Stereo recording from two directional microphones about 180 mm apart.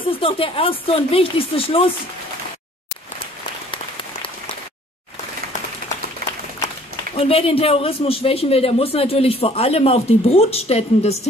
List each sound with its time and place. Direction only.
0.0 s speech: 30° left (ahead or behind)
7.2 s speech: 30° left (ahead or behind)